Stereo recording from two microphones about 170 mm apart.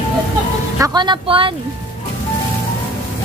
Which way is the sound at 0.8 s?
25° right (ahead or behind).